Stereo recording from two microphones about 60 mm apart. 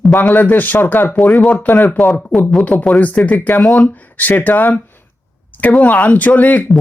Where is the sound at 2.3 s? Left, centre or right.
Centre.